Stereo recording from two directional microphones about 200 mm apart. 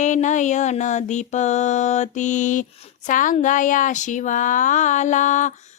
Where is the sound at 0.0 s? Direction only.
40° left (ahead or behind).